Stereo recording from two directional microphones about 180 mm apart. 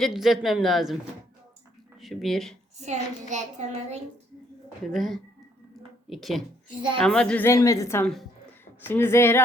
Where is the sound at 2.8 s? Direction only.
40° right (ahead or behind).